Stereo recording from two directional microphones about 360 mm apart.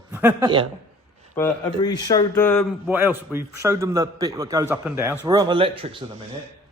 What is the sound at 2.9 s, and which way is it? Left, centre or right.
A man's voice, centre.